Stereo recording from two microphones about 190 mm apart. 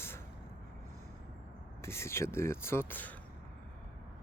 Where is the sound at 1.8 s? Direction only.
15° left (ahead or behind).